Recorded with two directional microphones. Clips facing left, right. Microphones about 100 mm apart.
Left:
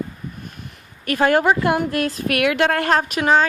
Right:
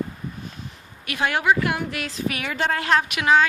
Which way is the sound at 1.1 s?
45° left (ahead or behind).